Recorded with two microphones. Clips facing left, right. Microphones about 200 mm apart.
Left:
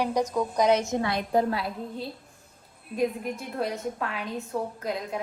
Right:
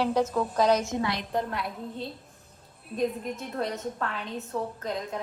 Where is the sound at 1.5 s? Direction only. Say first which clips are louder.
Left 4 dB; 30° left (ahead or behind).